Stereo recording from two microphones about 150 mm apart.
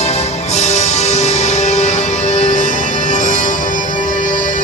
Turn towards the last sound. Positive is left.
turn(degrees=55)  # may be behind; listen again after turning